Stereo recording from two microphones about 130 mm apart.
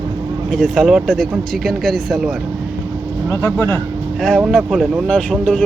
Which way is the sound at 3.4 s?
20° left (ahead or behind).